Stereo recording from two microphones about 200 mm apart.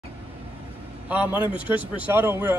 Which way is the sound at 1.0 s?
5° right (ahead or behind).